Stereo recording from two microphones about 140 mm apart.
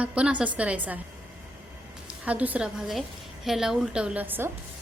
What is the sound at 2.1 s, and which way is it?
A woman's voice, 10° right (ahead or behind).